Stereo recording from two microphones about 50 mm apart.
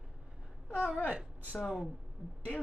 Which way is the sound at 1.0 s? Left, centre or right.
Right.